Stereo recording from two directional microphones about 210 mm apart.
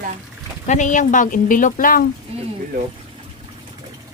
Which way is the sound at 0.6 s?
35° left (ahead or behind).